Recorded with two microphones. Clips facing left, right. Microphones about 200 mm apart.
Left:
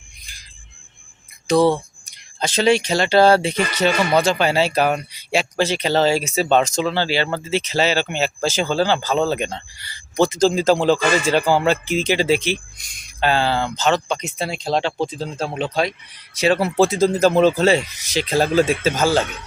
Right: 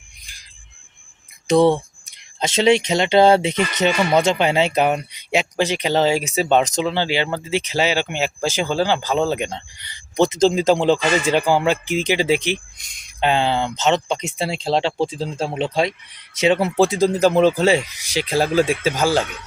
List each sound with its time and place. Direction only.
1.5 s speech: 25° right (ahead or behind)